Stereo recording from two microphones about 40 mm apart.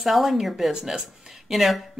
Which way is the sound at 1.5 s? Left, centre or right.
Centre.